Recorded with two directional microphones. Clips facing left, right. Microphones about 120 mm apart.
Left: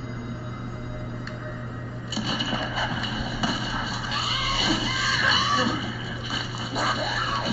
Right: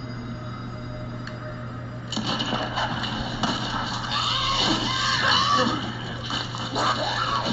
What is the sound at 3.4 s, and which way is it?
Music, 30° right (ahead or behind).